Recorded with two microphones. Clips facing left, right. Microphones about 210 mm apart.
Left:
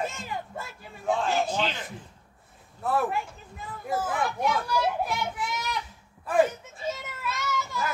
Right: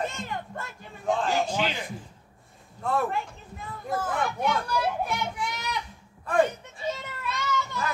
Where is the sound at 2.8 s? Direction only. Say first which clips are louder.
Even; 5° left (ahead or behind).